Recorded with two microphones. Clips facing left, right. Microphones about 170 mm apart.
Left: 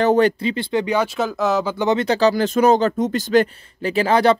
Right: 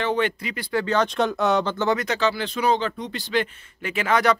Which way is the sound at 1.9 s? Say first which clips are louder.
Left 10 dB; 30° left (ahead or behind).